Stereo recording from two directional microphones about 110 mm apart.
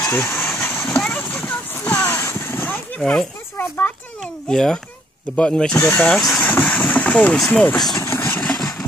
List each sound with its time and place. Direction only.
0.1 s speech: 20° left (ahead or behind)
0.4 s vehicle: 10° left (ahead or behind)
3.0 s speech: 5° left (ahead or behind)
3.5 s a sound: 20° left (ahead or behind)
4.2 s speech: 5° left (ahead or behind)
6.3 s vehicle: 10° left (ahead or behind)
7.3 s speech: 5° left (ahead or behind)
7.9 s vehicle: 25° left (ahead or behind)